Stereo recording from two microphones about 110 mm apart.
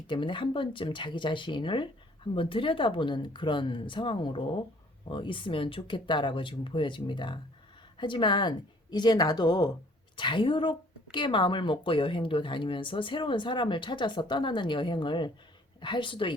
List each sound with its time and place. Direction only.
0.1 s speech: 50° left (ahead or behind)